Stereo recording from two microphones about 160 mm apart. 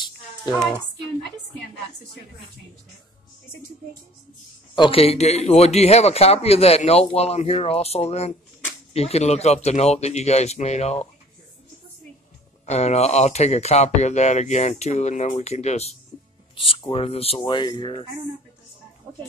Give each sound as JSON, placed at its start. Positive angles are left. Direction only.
{"t": 0.5, "sound": "a sound", "side_deg": 0}
{"t": 4.7, "sound": "a man's voice", "side_deg": 35}
{"t": 12.6, "sound": "a man's voice", "side_deg": 45}